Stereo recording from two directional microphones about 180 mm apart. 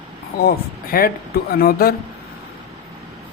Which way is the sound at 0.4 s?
55° left (ahead or behind).